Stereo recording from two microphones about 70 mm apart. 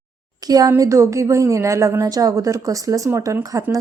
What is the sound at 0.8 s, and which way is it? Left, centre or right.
Speech, right.